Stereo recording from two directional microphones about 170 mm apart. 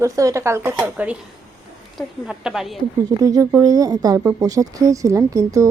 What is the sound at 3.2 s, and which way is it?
Speech, 20° right (ahead or behind).